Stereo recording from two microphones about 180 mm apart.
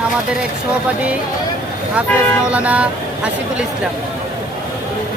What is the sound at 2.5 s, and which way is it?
Speech, 5° right (ahead or behind).